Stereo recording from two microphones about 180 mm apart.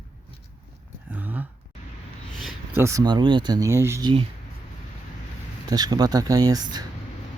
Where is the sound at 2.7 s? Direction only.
15° right (ahead or behind).